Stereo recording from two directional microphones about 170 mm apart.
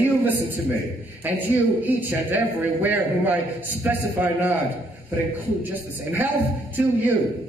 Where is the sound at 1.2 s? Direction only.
10° right (ahead or behind).